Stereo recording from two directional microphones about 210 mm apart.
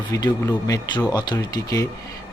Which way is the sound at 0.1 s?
15° left (ahead or behind).